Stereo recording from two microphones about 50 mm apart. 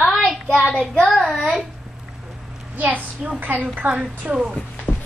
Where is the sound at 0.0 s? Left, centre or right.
Centre.